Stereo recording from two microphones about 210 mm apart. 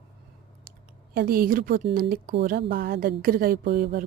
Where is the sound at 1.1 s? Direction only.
45° right (ahead or behind).